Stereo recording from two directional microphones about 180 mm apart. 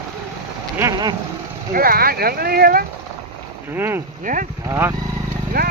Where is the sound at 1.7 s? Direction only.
55° right (ahead or behind).